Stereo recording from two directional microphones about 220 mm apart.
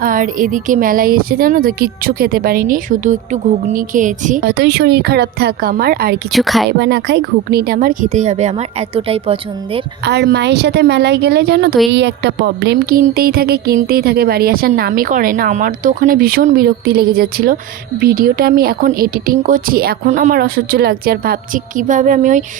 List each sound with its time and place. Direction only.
0.0 s a woman's voice: 40° right (ahead or behind)
6.3 s a woman's voice: centre (ahead or behind)
6.7 s a woman's voice: 50° right (ahead or behind); by 9.8 s 25° right (ahead or behind)
10.0 s a woman's voice: 50° right (ahead or behind)